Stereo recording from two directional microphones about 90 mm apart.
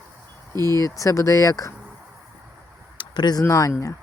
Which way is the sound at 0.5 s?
45° right (ahead or behind).